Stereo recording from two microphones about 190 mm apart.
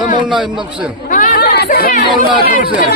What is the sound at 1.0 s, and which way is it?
Chatter, 45° left (ahead or behind).